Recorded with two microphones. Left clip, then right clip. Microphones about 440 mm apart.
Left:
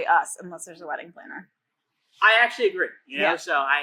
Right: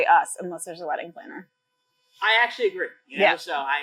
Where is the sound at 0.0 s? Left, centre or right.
Right.